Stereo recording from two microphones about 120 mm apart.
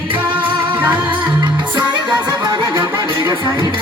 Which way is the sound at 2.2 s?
30° right (ahead or behind).